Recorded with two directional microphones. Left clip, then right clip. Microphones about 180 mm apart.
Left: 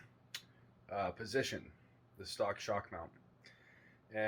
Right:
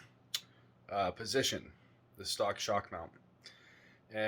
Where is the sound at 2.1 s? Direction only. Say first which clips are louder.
Right 3 dB; 15° right (ahead or behind).